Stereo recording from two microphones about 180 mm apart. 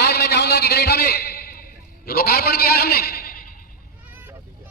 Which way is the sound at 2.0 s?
60° left (ahead or behind).